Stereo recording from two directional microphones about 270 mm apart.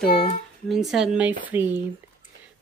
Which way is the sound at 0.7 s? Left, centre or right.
Centre.